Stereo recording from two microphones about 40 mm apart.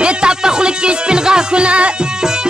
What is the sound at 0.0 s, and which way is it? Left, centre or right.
Music, right.